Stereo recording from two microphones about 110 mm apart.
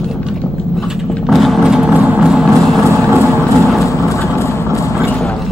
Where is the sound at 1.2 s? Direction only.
Centre (ahead or behind).